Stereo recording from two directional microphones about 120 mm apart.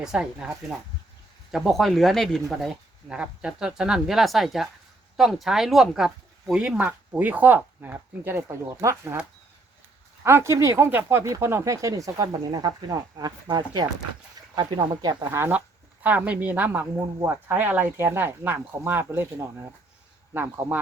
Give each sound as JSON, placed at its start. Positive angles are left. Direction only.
{"t": 0.0, "sound": "speech", "side_deg": -5}
{"t": 10.2, "sound": "speech", "side_deg": -20}
{"t": 15.4, "sound": "speech", "side_deg": -20}